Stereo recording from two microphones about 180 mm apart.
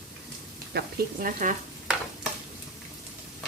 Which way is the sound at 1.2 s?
45° right (ahead or behind).